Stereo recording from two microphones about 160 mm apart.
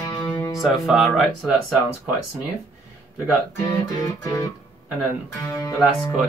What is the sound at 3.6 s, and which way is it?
Speech, 20° left (ahead or behind).